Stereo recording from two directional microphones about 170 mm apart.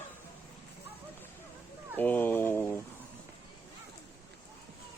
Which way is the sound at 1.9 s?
10° left (ahead or behind).